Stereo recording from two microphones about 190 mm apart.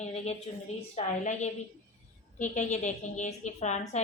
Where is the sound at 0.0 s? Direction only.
35° left (ahead or behind).